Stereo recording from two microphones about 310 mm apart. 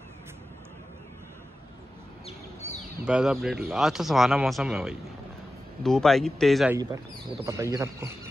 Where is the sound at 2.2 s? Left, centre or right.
Left.